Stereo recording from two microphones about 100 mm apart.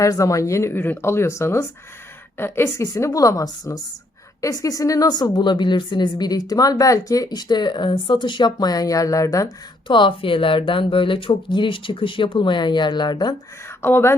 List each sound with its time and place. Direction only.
0.0 s speech: 35° left (ahead or behind)
2.8 s speech: 35° left (ahead or behind)
9.8 s speech: 55° left (ahead or behind)
13.8 s speech: 25° left (ahead or behind)